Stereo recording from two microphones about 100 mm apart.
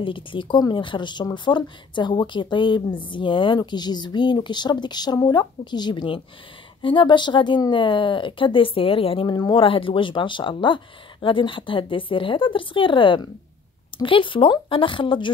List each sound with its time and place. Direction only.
0.0 s speech: 55° left (ahead or behind)
9.3 s speech: 50° left (ahead or behind)